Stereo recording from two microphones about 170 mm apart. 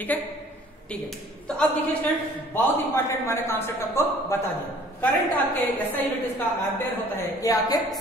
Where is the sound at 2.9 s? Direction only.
15° left (ahead or behind).